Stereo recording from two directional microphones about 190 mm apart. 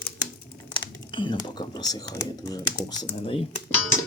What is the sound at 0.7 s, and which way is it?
Speech, 25° left (ahead or behind).